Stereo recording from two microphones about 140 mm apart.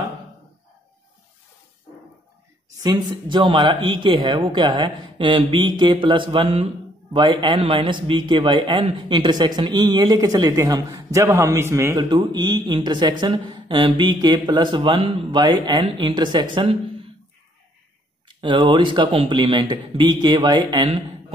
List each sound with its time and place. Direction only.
2.8 s a man's voice: 30° right (ahead or behind)
12.0 s a man's voice: 35° right (ahead or behind)
18.3 s a man's voice: 35° right (ahead or behind)